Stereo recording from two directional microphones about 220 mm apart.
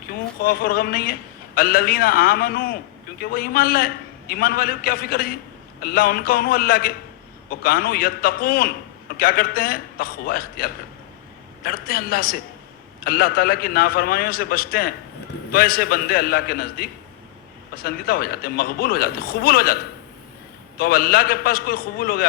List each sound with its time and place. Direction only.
0.4 s a man's voice: 40° left (ahead or behind)